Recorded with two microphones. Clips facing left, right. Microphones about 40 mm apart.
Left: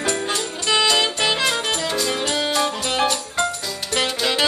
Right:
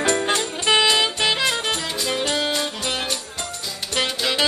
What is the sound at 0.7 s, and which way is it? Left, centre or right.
Music, centre.